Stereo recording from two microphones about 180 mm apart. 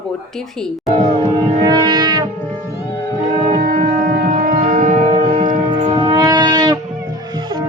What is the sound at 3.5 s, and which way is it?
Music, 45° right (ahead or behind).